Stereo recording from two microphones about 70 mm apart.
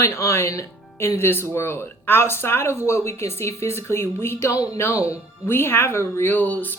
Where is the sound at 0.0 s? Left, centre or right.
Left.